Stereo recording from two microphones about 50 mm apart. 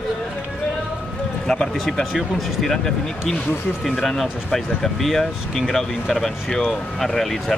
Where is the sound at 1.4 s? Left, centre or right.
Centre.